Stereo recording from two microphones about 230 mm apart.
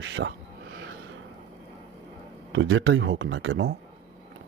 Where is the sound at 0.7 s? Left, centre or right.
Right.